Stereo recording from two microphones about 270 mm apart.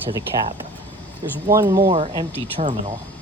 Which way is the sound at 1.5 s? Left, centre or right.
Centre.